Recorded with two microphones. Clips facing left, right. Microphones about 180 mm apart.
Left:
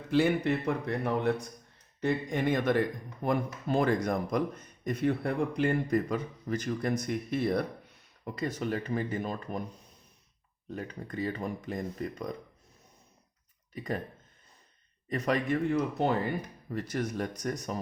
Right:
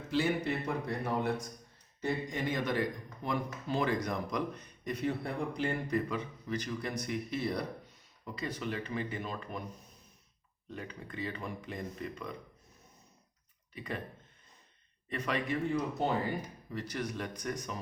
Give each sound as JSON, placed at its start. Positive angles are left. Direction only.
{"t": 0.1, "sound": "a man's voice", "side_deg": 60}
{"t": 10.7, "sound": "speech", "side_deg": 40}
{"t": 13.7, "sound": "speech", "side_deg": 40}
{"t": 15.1, "sound": "a man's voice", "side_deg": 40}